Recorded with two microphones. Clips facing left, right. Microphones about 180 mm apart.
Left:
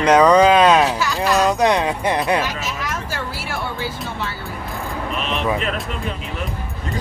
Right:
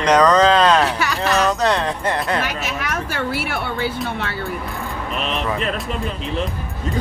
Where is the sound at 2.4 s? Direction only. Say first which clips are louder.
Even; 65° right (ahead or behind).